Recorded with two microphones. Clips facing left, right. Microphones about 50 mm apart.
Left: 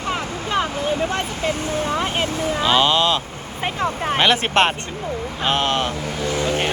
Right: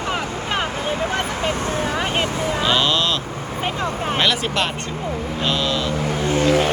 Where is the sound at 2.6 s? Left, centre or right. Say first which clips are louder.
Left 4 dB; centre.